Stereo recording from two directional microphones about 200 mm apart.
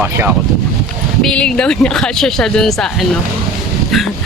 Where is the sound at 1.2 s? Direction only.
5° left (ahead or behind).